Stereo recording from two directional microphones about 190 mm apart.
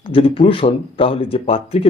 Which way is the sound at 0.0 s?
30° left (ahead or behind).